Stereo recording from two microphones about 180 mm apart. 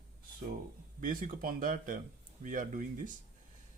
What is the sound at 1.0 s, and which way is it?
Speech, 50° right (ahead or behind).